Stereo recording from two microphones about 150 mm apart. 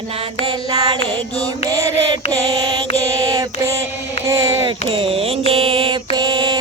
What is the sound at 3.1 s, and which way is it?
Child singing, 25° right (ahead or behind).